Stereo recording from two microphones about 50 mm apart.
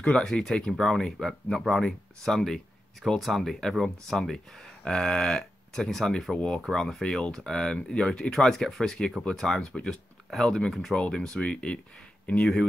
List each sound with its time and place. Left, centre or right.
0.2 s speech: centre
9.6 s speech: centre
9.8 s speech: centre
11.0 s speech: centre